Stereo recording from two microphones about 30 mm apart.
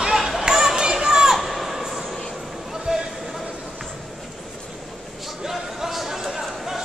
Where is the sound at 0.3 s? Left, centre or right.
Centre.